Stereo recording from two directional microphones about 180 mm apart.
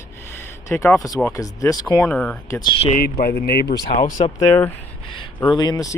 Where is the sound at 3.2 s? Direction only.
60° left (ahead or behind).